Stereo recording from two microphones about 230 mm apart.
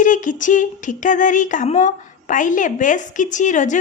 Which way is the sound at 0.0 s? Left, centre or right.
Left.